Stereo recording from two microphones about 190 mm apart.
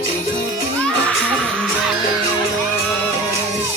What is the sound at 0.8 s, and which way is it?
Music, 5° left (ahead or behind).